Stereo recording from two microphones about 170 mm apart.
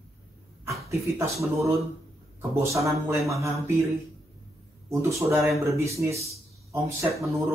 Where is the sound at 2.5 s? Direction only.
15° right (ahead or behind).